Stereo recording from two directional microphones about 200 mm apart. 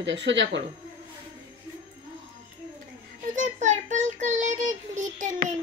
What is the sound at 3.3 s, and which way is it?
Child singing, 40° right (ahead or behind).